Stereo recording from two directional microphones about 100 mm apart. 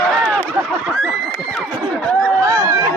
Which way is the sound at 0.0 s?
15° left (ahead or behind).